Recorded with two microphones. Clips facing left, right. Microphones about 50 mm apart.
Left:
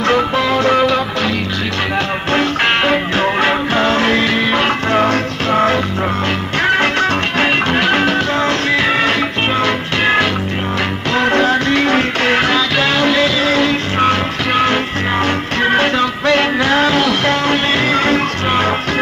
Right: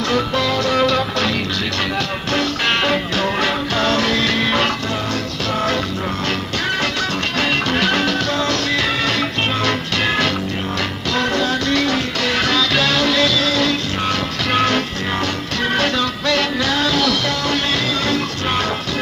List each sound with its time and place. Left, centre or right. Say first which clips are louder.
0.0 s music: left 4 dB; left
4.8 s music: left 8 dB; left; by 10.3 s centre
11.1 s music: left 6 dB; left
12.4 s music: left 3 dB; left
15.1 s music: left 6 dB; left